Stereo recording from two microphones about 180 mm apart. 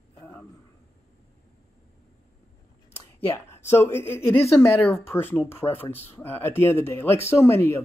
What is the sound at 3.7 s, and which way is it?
Speech, 15° left (ahead or behind).